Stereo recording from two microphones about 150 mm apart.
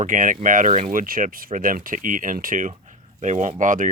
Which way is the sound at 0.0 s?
60° right (ahead or behind).